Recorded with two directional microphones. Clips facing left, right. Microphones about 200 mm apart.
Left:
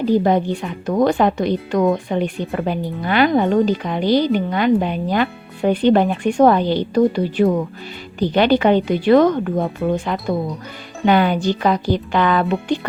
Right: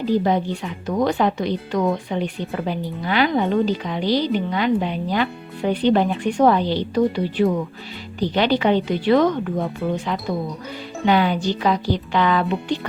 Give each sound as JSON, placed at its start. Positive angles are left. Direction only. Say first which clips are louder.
{"t": 0.1, "sound": "a woman's voice", "louder": "left 3 dB", "side_deg": 50}